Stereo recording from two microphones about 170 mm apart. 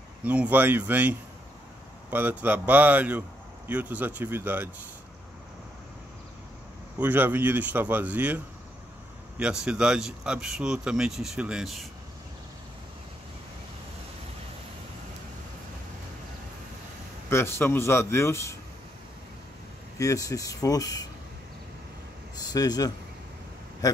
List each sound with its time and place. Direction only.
0.2 s speech: 10° right (ahead or behind)
7.0 s speech: 10° right (ahead or behind)
9.4 s speech: 5° right (ahead or behind)
17.3 s speech: 15° left (ahead or behind)
20.0 s speech: 20° left (ahead or behind)
22.4 s speech: 20° left (ahead or behind)